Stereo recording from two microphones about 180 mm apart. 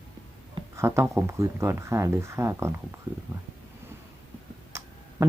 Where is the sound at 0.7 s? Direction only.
15° right (ahead or behind).